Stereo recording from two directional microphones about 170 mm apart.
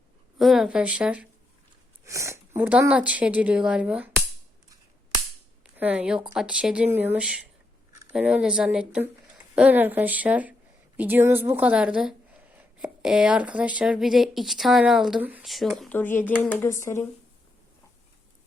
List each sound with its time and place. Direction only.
0.3 s speech: centre (ahead or behind)
2.0 s speech: 15° right (ahead or behind)
5.7 s speech: 10° right (ahead or behind)
16.0 s speech: 10° left (ahead or behind)